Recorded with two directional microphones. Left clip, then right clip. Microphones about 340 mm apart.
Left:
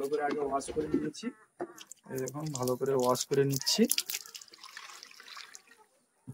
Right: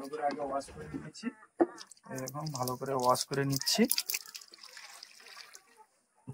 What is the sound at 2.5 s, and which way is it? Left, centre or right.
Speech, centre.